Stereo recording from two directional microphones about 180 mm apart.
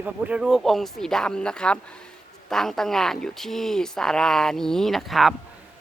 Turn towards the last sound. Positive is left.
turn(degrees=0)  # may be behind; listen again after turning